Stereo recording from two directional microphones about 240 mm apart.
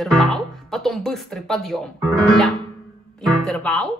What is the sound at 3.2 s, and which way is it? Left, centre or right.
Speech, centre.